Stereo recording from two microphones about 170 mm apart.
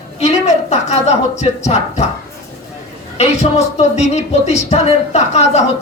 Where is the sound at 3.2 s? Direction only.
40° left (ahead or behind).